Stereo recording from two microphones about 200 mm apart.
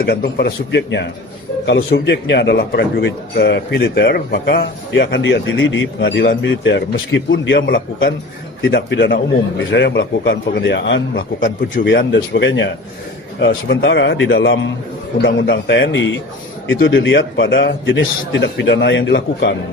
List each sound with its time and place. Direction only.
0.0 s a man's voice: 55° left (ahead or behind)
11.2 s a man's voice: 40° left (ahead or behind)
11.9 s a man's voice: 60° left (ahead or behind)